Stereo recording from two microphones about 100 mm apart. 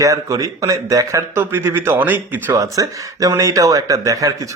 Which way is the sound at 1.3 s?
20° right (ahead or behind).